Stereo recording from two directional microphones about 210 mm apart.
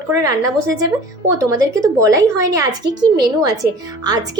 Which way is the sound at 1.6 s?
15° right (ahead or behind).